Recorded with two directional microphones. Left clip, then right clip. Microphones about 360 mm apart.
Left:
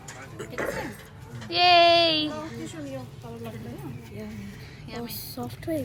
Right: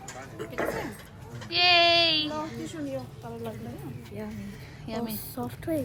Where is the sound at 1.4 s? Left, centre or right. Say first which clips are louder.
Left 3 dB; centre.